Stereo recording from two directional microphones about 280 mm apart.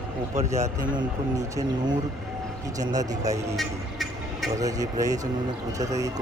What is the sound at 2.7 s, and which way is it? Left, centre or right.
Speech, centre.